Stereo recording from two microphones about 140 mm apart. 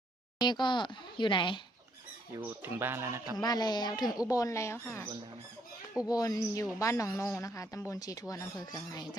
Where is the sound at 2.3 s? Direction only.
15° right (ahead or behind).